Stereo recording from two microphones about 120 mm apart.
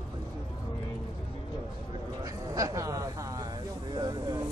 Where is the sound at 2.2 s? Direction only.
30° right (ahead or behind).